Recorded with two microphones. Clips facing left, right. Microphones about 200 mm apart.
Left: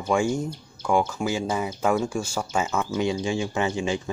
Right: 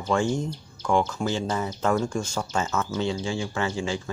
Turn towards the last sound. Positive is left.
turn(degrees=20)  # may be behind; listen again after turning